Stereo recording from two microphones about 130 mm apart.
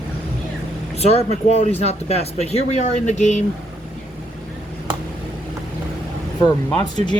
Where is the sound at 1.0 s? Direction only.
55° left (ahead or behind).